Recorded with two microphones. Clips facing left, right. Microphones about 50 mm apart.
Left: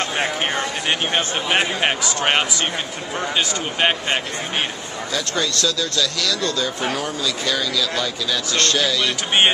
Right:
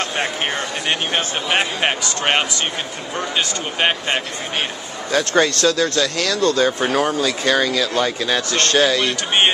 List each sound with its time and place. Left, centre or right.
0.2 s a man's voice: centre
5.1 s speech: right